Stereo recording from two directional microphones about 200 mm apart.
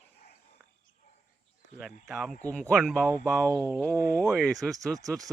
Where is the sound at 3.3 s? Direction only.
15° right (ahead or behind).